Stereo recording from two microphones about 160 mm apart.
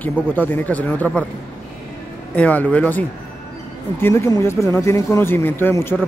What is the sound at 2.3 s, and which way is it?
Speech, 10° left (ahead or behind).